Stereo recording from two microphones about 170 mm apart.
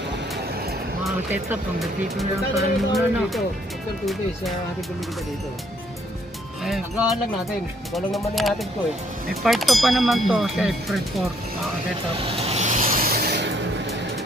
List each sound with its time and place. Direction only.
1.8 s speech: centre (ahead or behind)
6.6 s speech: centre (ahead or behind)
8.4 s speech: centre (ahead or behind)
12.2 s vehicle: 35° right (ahead or behind); by 13.5 s 70° right (ahead or behind)